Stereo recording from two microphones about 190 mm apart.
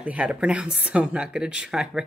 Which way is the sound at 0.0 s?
5° right (ahead or behind).